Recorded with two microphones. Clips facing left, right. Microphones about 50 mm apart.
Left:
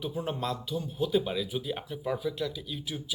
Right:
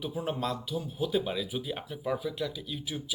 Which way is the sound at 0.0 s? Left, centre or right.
Centre.